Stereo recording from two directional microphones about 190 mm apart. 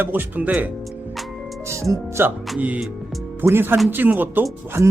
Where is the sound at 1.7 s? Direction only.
15° right (ahead or behind).